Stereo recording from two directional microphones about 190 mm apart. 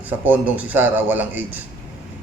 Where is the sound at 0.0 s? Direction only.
10° right (ahead or behind).